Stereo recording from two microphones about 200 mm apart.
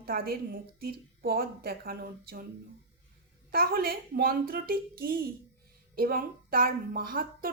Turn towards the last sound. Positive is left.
turn(degrees=-45)  # may be behind; listen again after turning